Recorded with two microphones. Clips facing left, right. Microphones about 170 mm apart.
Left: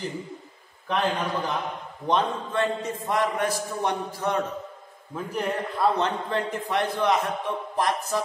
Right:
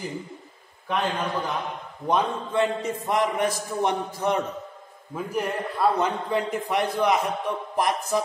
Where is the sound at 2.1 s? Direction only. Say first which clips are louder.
Right 1 dB; 15° right (ahead or behind).